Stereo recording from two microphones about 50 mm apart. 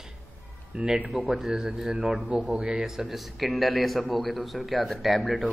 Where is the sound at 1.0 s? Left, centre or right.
Centre.